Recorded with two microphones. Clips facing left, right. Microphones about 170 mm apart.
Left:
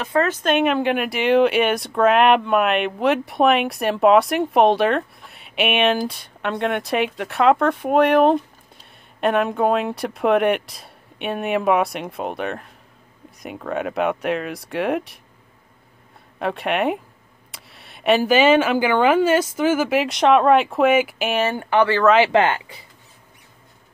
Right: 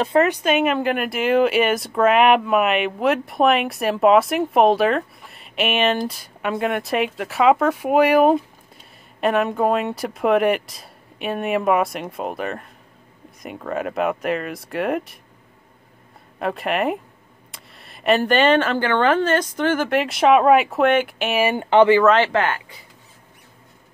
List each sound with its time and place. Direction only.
0.0 s speech: 25° right (ahead or behind)
0.3 s speech: 10° right (ahead or behind)
16.3 s speech: centre (ahead or behind)
21.4 s speech: 15° right (ahead or behind)
22.0 s speech: 5° left (ahead or behind)
22.3 s speech: 20° left (ahead or behind)